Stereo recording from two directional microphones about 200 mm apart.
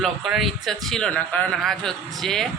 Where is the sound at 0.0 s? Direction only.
Centre (ahead or behind).